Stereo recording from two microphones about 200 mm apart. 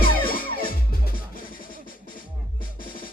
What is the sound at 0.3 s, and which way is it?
Music, 45° left (ahead or behind).